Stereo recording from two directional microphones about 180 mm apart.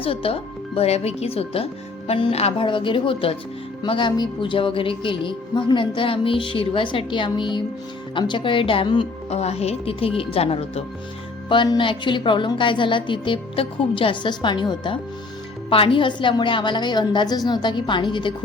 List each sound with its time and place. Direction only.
0.0 s speech: 30° left (ahead or behind)